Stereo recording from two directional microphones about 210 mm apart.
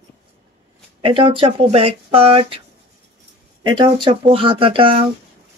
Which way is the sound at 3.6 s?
20° right (ahead or behind).